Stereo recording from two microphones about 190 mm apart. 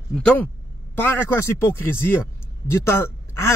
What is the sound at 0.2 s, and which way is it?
Speech, 5° left (ahead or behind).